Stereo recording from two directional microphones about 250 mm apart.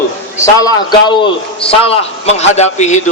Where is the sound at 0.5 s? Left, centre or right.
Centre.